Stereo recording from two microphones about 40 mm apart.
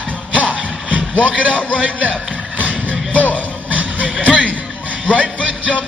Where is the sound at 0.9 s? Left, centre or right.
Right.